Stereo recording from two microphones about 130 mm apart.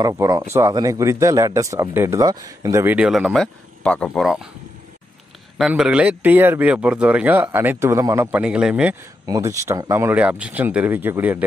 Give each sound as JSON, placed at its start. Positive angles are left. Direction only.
{"t": 0.1, "sound": "speech", "side_deg": -25}
{"t": 3.1, "sound": "speech", "side_deg": 0}
{"t": 5.6, "sound": "speech", "side_deg": -5}
{"t": 8.3, "sound": "speech", "side_deg": -10}
{"t": 9.2, "sound": "speech", "side_deg": -25}